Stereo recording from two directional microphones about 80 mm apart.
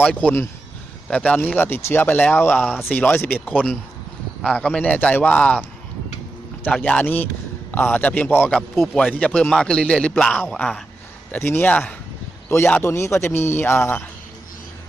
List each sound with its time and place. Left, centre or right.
0.0 s a man's voice: centre
2.6 s speech: centre
2.8 s a man's voice: left
6.7 s a man's voice: centre
12.5 s a man's voice: left